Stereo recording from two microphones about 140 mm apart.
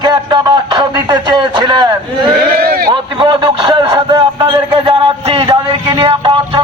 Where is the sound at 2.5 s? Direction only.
90° right.